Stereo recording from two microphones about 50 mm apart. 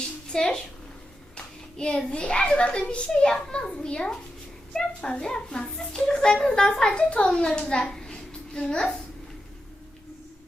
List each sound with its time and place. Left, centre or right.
0.3 s a child's voice: centre
2.0 s a child's voice: centre
3.2 s a child's voice: centre
7.7 s hands: centre